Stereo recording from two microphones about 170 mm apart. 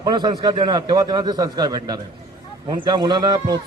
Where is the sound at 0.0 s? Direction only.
25° right (ahead or behind).